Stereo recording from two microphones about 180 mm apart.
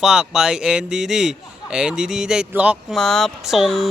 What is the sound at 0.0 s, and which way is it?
A man's voice, 5° right (ahead or behind).